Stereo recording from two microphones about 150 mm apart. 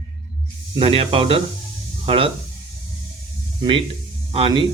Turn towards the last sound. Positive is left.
turn(degrees=-40)  # may be behind; listen again after turning